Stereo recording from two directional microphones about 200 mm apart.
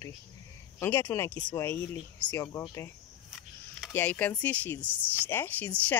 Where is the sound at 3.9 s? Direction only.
10° left (ahead or behind).